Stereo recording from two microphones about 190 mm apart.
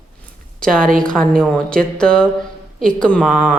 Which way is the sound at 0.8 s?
45° right (ahead or behind).